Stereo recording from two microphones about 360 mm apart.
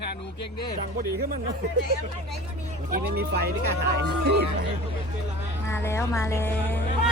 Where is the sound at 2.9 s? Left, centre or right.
Right.